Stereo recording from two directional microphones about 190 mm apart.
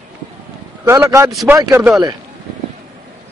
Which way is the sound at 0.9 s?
15° right (ahead or behind).